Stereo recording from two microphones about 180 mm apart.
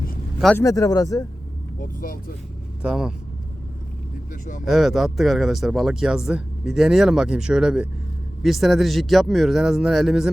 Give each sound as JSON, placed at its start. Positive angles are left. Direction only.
{"t": 0.5, "sound": "speech", "side_deg": 15}
{"t": 1.8, "sound": "speech", "side_deg": 55}
{"t": 2.8, "sound": "speech", "side_deg": -5}
{"t": 4.3, "sound": "speech", "side_deg": 45}
{"t": 4.6, "sound": "speech", "side_deg": 0}